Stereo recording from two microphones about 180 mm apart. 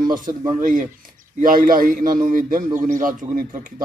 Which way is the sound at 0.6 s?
50° right (ahead or behind).